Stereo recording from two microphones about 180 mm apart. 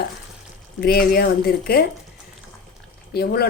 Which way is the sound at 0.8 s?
55° left (ahead or behind).